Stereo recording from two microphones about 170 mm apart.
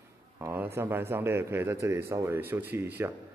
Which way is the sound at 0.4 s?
15° right (ahead or behind).